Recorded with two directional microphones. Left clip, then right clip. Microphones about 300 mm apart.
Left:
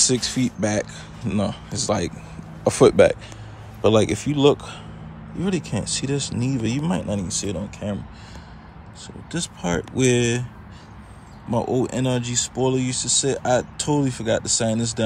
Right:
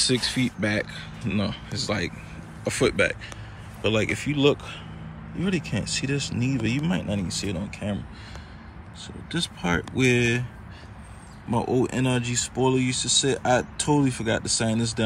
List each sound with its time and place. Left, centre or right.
0.0 s speech: centre
9.0 s speech: centre
11.5 s speech: centre